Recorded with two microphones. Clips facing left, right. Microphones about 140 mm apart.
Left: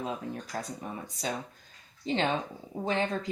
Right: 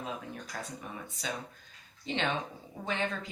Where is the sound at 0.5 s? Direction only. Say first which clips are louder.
Left 4 dB; 40° left (ahead or behind).